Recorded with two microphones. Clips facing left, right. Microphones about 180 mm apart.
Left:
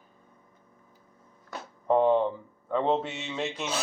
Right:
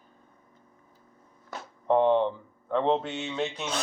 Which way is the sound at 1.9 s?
5° left (ahead or behind).